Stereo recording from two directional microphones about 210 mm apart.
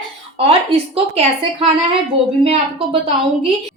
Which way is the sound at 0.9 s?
25° right (ahead or behind).